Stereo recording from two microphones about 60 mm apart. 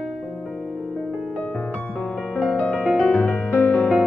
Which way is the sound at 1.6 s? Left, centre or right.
Centre.